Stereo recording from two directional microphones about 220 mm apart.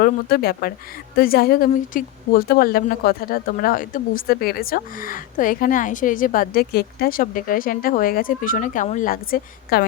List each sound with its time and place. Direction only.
0.0 s a woman's voice: 45° left (ahead or behind)